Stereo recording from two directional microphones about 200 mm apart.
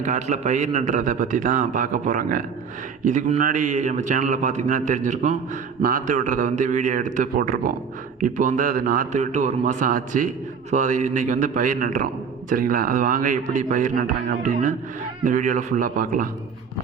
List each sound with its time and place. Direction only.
0.0 s a man's voice: 35° right (ahead or behind)